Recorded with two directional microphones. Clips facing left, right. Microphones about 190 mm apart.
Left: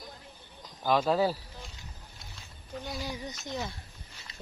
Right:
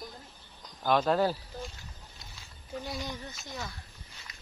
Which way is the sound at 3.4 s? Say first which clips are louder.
Left 5 dB; 20° left (ahead or behind).